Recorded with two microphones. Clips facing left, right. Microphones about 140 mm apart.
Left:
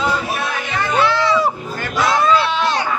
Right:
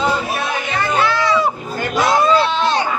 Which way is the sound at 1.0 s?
25° left (ahead or behind).